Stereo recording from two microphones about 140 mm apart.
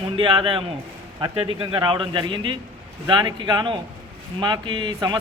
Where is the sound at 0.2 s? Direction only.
40° right (ahead or behind).